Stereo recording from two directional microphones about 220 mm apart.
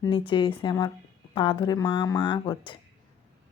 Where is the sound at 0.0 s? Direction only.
20° left (ahead or behind).